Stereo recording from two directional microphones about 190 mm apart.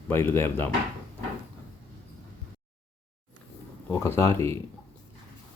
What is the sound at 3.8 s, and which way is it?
Speech, 15° left (ahead or behind).